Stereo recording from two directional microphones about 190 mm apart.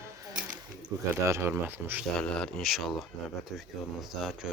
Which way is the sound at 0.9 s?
20° right (ahead or behind).